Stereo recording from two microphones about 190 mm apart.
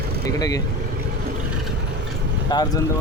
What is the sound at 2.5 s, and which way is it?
Speech, 20° left (ahead or behind).